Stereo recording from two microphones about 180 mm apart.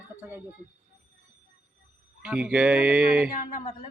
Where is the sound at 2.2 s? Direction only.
5° right (ahead or behind).